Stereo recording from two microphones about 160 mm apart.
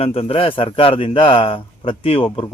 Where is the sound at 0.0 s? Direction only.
35° left (ahead or behind).